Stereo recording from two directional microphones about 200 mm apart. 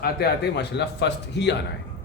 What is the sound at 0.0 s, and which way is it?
A man's voice, 50° left (ahead or behind).